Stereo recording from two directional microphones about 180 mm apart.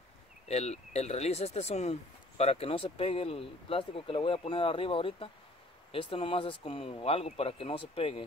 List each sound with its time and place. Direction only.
0.5 s speech: 35° left (ahead or behind)